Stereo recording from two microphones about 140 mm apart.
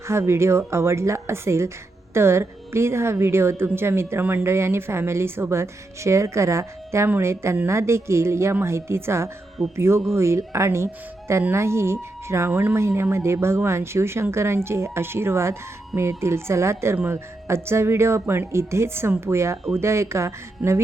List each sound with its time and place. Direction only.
0.1 s a woman's voice: 20° right (ahead or behind)